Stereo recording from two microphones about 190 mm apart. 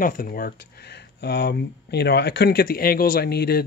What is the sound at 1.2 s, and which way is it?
Speech, 60° left (ahead or behind).